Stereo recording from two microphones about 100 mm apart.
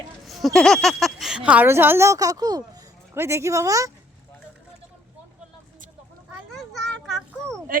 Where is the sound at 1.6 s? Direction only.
25° right (ahead or behind); by 2.8 s 40° right (ahead or behind).